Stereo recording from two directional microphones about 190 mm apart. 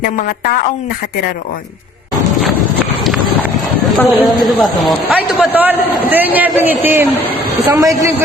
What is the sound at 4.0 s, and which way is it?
A man's voice, 5° left (ahead or behind).